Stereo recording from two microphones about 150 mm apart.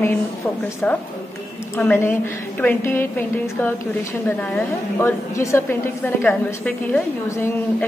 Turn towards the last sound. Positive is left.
turn(degrees=15)  # may be behind; listen again after turning